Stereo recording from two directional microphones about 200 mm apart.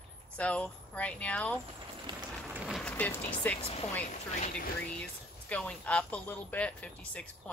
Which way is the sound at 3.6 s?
30° left (ahead or behind).